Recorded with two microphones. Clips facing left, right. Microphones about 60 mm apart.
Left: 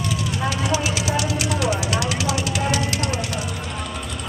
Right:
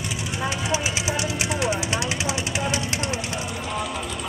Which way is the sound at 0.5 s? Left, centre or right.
Right.